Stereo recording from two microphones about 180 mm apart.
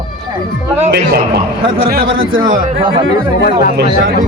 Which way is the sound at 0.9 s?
60° right (ahead or behind).